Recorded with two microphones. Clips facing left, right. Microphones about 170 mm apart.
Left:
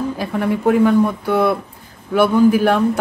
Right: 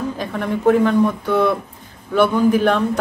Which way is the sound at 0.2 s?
10° left (ahead or behind).